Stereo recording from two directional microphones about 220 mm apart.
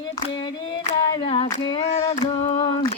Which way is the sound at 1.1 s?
25° left (ahead or behind).